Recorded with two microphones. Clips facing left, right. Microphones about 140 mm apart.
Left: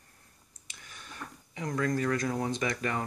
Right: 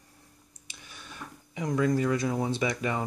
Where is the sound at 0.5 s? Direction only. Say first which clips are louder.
Right 1 dB; 15° right (ahead or behind).